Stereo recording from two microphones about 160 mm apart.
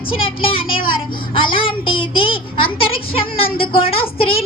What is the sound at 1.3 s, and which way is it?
A child's voice, 35° left (ahead or behind).